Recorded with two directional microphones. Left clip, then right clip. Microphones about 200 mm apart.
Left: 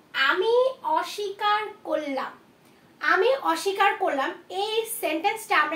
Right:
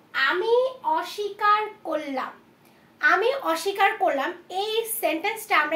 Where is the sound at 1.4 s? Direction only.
30° right (ahead or behind).